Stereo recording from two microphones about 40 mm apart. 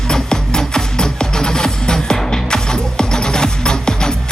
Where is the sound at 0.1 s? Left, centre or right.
Centre.